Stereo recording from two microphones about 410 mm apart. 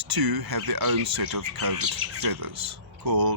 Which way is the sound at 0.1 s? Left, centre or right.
Right.